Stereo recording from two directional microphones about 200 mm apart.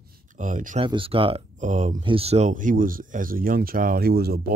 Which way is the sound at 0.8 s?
25° right (ahead or behind).